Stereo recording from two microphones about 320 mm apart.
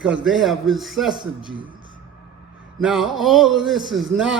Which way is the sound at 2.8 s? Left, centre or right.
Centre.